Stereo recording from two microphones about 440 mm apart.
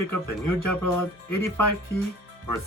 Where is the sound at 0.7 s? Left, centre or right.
Centre.